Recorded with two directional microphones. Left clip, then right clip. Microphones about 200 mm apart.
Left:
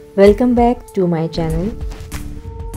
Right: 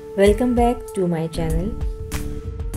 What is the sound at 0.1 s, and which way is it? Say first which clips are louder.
A woman's voice: left 6 dB; 15° left (ahead or behind).